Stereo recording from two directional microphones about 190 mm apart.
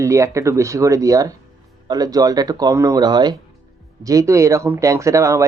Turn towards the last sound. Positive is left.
turn(degrees=-15)  # may be behind; listen again after turning